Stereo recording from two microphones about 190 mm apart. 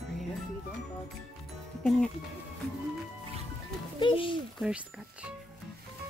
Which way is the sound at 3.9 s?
25° left (ahead or behind).